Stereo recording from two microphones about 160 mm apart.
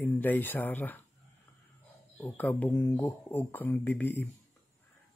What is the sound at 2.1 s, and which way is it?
Speech, 10° left (ahead or behind).